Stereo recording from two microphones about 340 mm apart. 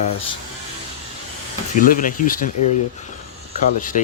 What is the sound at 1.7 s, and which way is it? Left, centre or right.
Speech, left.